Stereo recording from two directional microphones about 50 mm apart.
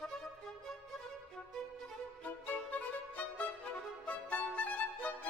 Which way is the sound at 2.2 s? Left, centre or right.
Left.